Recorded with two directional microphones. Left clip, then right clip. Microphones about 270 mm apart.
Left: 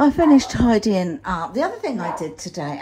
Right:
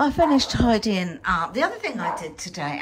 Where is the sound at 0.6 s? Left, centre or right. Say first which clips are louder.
Left 2 dB; right.